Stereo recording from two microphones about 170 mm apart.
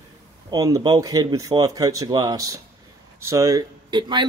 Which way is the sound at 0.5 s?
20° right (ahead or behind).